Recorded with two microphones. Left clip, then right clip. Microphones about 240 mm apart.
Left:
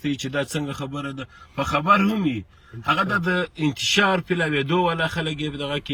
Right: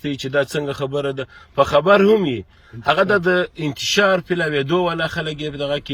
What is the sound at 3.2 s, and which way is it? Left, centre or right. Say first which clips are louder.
Speech: right 5 dB; centre.